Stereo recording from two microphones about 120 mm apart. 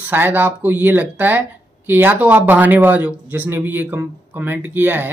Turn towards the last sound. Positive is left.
turn(degrees=-15)  # may be behind; listen again after turning